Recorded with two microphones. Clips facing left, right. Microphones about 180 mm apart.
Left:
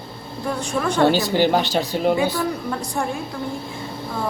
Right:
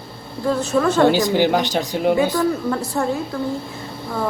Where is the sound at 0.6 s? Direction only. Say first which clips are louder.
Right 3 dB; 20° right (ahead or behind).